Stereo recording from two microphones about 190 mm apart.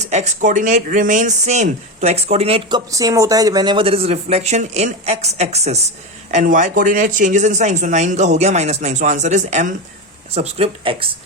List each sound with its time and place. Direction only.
0.0 s speech: 35° right (ahead or behind)